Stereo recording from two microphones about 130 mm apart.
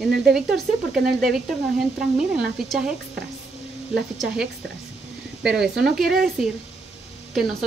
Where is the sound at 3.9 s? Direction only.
5° right (ahead or behind).